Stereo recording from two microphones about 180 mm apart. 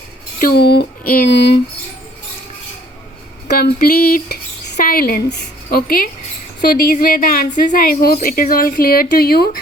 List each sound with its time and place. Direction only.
0.3 s speech: 55° left (ahead or behind)
3.6 s a woman's voice: 55° left (ahead or behind)